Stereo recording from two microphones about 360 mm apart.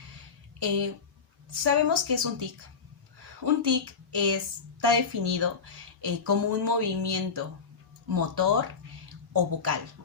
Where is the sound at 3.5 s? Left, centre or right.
Right.